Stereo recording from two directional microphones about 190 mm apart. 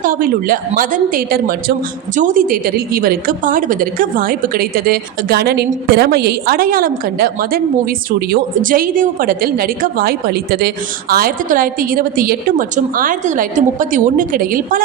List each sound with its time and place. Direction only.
0.0 s a woman's voice: 45° right (ahead or behind)